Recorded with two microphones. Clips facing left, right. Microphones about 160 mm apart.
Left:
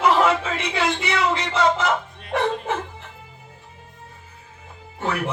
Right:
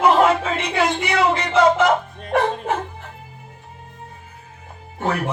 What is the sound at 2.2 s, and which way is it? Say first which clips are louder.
Bow-wow: right 2 dB; 50° right (ahead or behind).